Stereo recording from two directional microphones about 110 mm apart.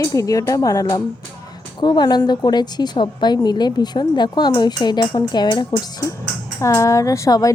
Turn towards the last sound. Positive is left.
turn(degrees=30)  # may be behind; listen again after turning